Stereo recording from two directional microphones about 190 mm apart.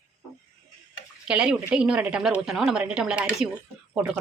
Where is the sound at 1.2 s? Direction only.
5° right (ahead or behind).